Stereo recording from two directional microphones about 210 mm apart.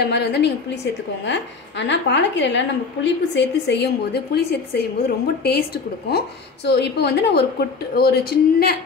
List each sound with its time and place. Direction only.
0.0 s a woman's voice: 50° left (ahead or behind)